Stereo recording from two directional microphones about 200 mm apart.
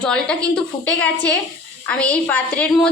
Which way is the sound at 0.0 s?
5° left (ahead or behind).